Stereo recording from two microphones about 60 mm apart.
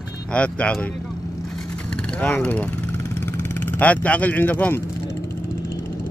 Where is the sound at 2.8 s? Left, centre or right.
Left.